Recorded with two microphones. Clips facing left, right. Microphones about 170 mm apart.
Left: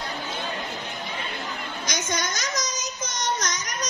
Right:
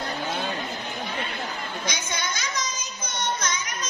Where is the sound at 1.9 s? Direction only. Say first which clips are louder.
Left 4 dB; 45° left (ahead or behind).